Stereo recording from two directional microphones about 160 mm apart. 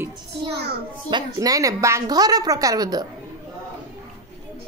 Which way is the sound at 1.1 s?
25° right (ahead or behind).